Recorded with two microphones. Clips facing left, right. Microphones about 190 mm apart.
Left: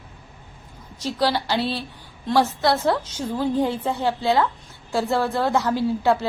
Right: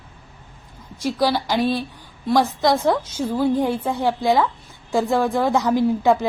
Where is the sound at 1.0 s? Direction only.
10° right (ahead or behind).